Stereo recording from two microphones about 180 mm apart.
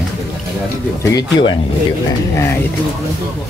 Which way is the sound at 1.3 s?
25° left (ahead or behind).